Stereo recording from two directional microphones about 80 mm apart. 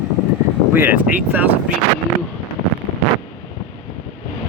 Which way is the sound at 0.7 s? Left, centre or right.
Right.